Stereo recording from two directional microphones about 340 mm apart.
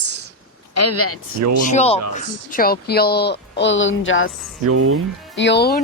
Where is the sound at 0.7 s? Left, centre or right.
Left.